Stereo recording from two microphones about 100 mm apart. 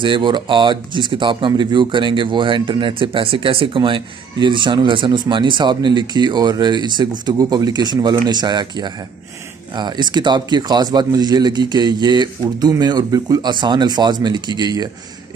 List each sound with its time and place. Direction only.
0.0 s speech: 50° right (ahead or behind)